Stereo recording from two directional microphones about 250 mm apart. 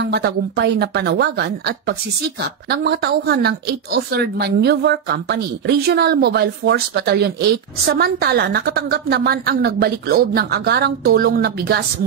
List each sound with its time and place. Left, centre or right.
0.0 s a woman's voice: right